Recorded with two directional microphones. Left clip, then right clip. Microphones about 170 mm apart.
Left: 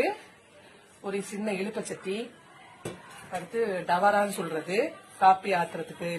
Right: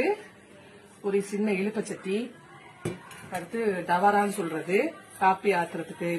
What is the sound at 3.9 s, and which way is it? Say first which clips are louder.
Speech: right 1 dB; 40° left (ahead or behind).